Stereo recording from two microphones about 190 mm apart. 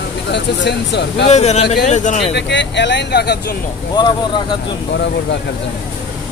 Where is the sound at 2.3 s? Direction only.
65° left (ahead or behind).